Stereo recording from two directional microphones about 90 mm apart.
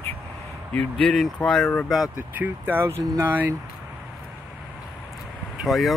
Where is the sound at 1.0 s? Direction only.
5° left (ahead or behind).